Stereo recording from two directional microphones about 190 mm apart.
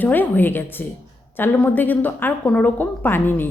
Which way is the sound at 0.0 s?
10° left (ahead or behind).